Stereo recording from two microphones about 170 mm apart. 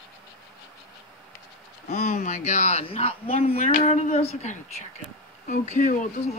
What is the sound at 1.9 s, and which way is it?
Speech, 45° left (ahead or behind).